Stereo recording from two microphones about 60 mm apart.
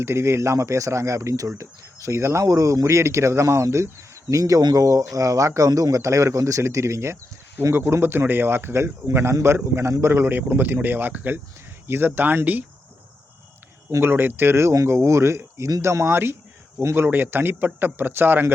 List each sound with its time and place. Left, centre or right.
0.0 s speech: right
2.4 s a man's voice: right
14.0 s a man's voice: right